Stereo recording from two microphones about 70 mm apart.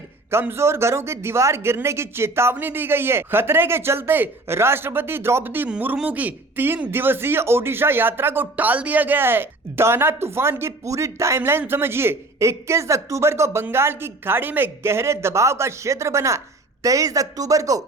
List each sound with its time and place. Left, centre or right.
0.3 s a man's voice: right
16.8 s speech: right